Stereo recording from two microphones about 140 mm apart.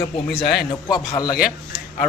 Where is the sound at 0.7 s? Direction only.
30° left (ahead or behind).